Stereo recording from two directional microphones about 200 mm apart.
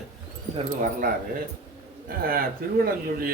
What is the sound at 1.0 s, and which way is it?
Speech, 45° right (ahead or behind).